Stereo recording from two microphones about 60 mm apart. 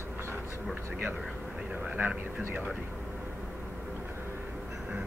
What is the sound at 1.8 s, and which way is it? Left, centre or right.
Speech, right.